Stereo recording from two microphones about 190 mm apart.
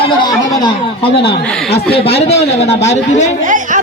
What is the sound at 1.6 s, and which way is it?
Speech, 30° left (ahead or behind).